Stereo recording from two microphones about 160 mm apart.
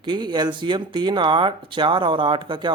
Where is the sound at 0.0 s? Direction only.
30° right (ahead or behind).